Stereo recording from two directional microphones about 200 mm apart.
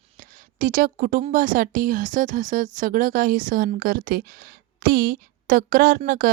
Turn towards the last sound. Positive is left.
turn(degrees=-45)  # may be behind; listen again after turning